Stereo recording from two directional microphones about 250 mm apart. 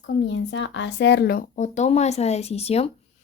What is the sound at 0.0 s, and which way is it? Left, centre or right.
Speech, left.